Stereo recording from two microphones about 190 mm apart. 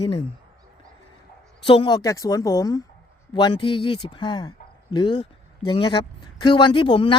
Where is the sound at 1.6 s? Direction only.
25° left (ahead or behind).